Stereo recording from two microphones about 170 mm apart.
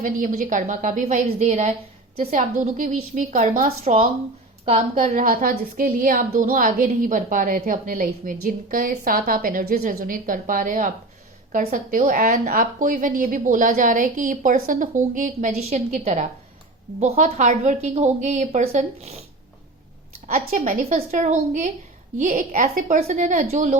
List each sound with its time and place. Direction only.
0.0 s a woman's voice: 50° right (ahead or behind)
4.9 s a woman's voice: 50° right (ahead or behind)
20.2 s a woman's voice: 45° right (ahead or behind)